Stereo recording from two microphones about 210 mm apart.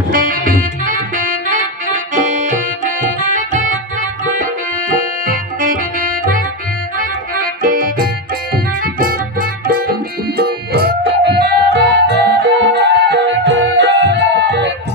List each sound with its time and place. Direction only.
0.1 s music: 40° right (ahead or behind)
4.4 s accordion: 40° right (ahead or behind)
7.0 s music: 40° right (ahead or behind)